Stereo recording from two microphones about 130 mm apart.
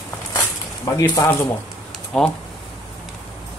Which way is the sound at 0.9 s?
30° left (ahead or behind).